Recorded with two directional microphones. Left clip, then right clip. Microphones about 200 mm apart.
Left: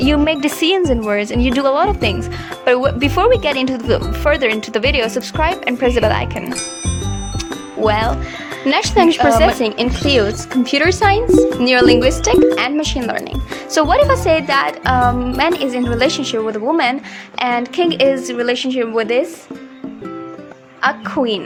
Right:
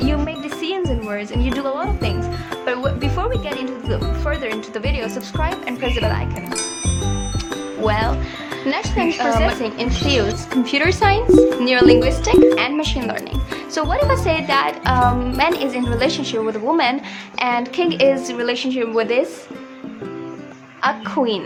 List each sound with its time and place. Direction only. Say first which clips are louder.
0.0 s speech: left 8 dB; 50° left (ahead or behind)
6.5 s music: left 1 dB; centre (ahead or behind)
7.8 s speech: left 4 dB; 30° left (ahead or behind)
8.6 s speech: left 8 dB; 45° left (ahead or behind)
14.1 s speech: left 4 dB; 25° left (ahead or behind)
20.8 s speech: left 2 dB; 20° left (ahead or behind)